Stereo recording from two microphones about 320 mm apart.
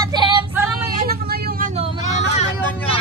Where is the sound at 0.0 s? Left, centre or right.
Centre.